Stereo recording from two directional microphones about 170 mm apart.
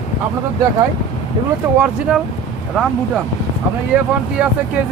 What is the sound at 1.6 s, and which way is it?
Speech, 15° right (ahead or behind).